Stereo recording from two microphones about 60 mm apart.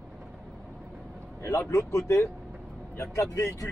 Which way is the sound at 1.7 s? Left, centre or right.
Left.